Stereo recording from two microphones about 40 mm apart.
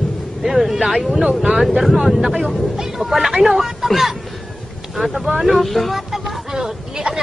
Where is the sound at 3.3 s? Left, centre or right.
Centre.